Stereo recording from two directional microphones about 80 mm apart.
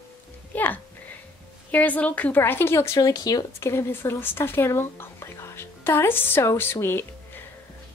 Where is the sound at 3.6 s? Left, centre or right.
Left.